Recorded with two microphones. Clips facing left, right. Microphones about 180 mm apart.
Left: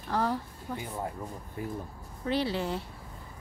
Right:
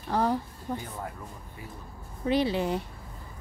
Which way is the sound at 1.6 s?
50° left (ahead or behind).